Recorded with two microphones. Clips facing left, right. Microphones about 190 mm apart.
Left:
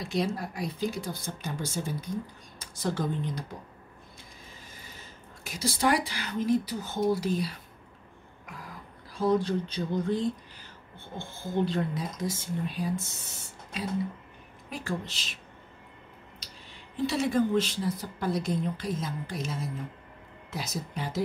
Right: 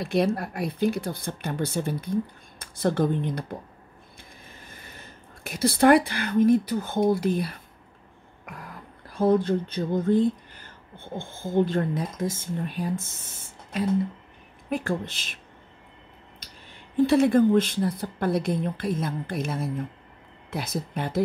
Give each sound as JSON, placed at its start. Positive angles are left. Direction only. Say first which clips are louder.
{"t": 0.0, "sound": "a woman's voice", "louder": "right 6 dB", "side_deg": -60}
{"t": 9.1, "sound": "a woman's voice", "louder": "right 4 dB", "side_deg": -55}
{"t": 16.9, "sound": "a woman's voice", "louder": "right 8 dB", "side_deg": -55}